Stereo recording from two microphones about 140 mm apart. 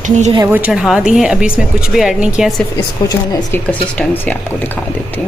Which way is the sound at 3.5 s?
10° left (ahead or behind).